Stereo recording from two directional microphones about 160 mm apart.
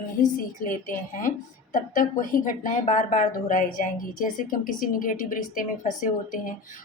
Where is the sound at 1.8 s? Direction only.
55° left (ahead or behind).